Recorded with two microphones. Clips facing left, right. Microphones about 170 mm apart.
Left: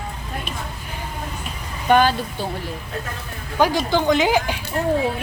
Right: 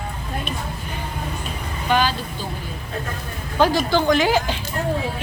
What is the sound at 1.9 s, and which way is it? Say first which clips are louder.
Speech: left 4 dB; 55° left (ahead or behind).